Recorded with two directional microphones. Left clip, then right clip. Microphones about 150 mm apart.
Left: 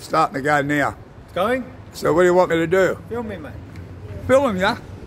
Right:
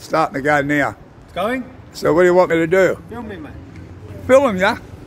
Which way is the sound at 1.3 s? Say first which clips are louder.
Left 1 dB; 30° left (ahead or behind).